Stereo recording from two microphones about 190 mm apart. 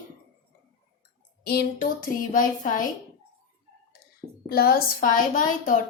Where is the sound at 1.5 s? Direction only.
55° left (ahead or behind).